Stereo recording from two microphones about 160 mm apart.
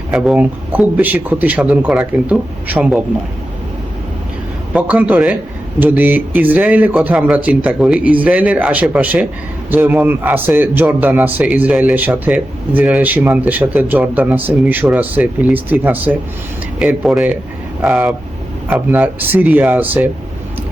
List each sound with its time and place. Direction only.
0.1 s speech: 5° right (ahead or behind)
4.7 s speech: 10° right (ahead or behind)